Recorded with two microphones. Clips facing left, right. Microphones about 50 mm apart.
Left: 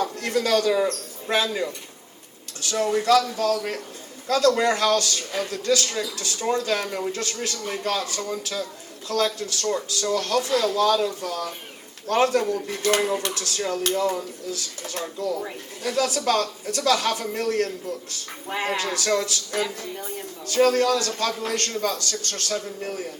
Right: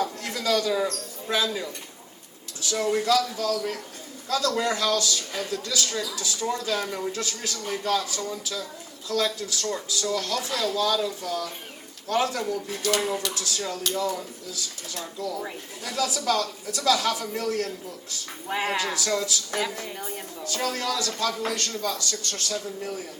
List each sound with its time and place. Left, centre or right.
0.2 s a sound: left
0.9 s speech: left
7.1 s speech: left
18.4 s speech: centre
18.9 s speech: left
20.0 s a woman's voice: centre
20.4 s speech: left